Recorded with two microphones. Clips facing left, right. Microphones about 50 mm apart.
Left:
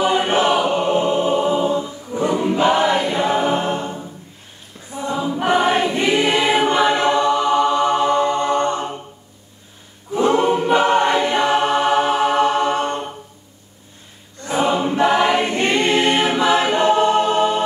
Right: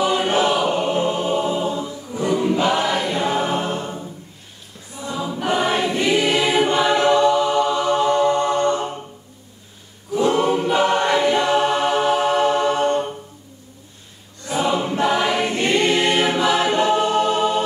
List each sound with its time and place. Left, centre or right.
0.0 s choir: left
4.9 s choir: left
10.1 s choir: left
14.4 s choir: left